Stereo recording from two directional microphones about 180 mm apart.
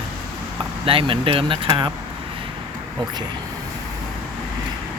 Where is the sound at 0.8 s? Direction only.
30° right (ahead or behind).